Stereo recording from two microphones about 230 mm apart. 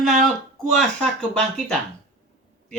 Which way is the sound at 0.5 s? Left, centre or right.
Centre.